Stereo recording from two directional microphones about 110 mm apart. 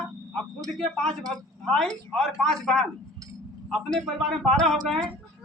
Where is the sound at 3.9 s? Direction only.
Centre (ahead or behind).